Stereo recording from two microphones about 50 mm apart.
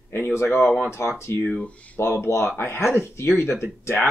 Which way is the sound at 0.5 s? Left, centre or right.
Centre.